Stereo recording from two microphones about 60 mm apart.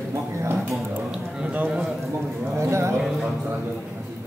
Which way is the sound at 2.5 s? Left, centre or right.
Right.